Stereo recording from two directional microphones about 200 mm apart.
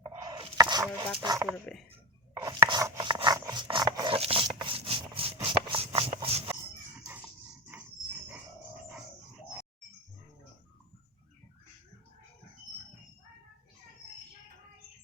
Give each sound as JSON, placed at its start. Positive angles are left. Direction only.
{"t": 0.0, "sound": "chopping", "side_deg": -20}
{"t": 1.2, "sound": "speech", "side_deg": -15}
{"t": 2.3, "sound": "rub", "side_deg": -15}